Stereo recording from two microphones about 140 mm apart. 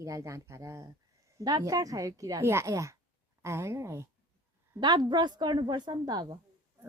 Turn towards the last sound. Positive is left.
turn(degrees=-30)  # may be behind; listen again after turning